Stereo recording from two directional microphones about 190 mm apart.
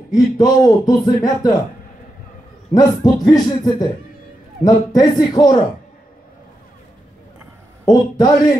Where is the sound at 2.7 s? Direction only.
20° left (ahead or behind).